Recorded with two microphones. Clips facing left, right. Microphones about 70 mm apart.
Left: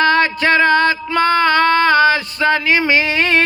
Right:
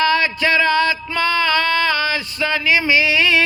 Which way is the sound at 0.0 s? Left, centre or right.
Left.